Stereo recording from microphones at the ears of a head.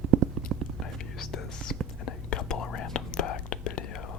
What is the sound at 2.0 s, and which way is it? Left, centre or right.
Whispering, left.